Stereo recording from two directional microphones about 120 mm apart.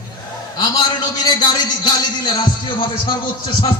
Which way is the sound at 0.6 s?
35° left (ahead or behind).